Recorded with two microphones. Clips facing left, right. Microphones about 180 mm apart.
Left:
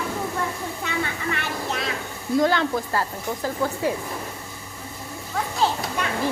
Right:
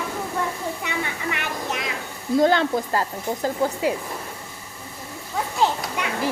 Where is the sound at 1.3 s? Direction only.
15° right (ahead or behind).